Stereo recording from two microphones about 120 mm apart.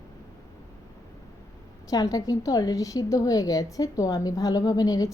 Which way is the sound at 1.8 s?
30° left (ahead or behind).